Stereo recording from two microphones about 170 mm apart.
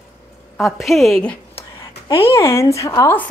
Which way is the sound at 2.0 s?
35° left (ahead or behind).